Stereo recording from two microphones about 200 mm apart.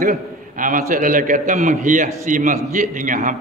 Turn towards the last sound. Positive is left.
turn(degrees=-40)  # may be behind; listen again after turning